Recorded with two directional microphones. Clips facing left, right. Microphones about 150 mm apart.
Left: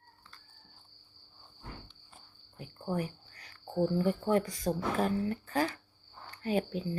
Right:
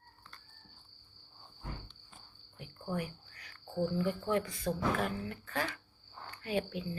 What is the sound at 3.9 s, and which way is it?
Speech, 40° left (ahead or behind).